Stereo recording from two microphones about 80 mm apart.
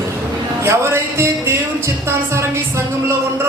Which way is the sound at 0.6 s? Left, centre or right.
Right.